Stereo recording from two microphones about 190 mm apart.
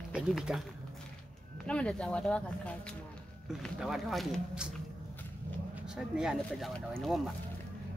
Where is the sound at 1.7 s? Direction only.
5° left (ahead or behind).